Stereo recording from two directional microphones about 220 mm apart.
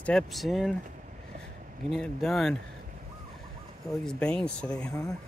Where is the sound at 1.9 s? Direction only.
Centre (ahead or behind).